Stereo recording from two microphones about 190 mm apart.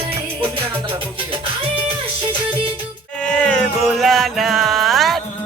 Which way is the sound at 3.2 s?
5° left (ahead or behind).